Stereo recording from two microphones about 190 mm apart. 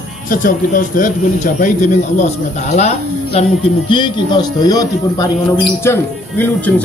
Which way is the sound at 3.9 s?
25° left (ahead or behind).